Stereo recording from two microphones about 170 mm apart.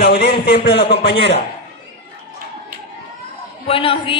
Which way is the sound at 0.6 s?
75° left (ahead or behind).